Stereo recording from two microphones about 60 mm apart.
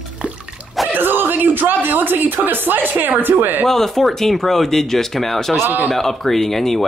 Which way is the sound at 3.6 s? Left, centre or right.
Centre.